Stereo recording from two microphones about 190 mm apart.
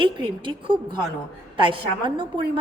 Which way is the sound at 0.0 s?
25° right (ahead or behind).